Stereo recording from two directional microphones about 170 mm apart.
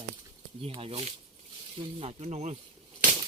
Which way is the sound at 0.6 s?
35° right (ahead or behind).